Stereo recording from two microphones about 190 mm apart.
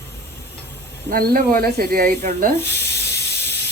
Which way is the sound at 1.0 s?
55° right (ahead or behind).